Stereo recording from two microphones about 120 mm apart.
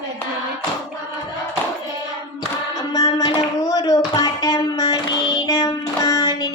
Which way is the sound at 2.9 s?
35° left (ahead or behind).